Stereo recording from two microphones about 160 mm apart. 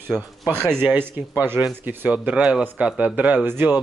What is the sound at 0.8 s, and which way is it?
Speech, 10° right (ahead or behind).